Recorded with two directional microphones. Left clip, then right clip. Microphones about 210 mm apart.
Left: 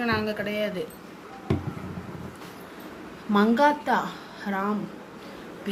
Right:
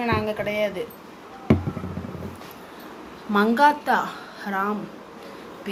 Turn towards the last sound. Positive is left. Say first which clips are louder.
# right 3 dB
turn(degrees=5)  # may be behind; listen again after turning